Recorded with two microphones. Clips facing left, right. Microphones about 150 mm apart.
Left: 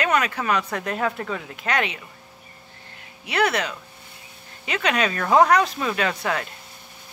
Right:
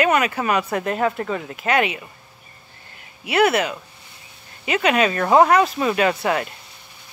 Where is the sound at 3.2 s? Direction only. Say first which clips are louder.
Right 5 dB; 5° right (ahead or behind).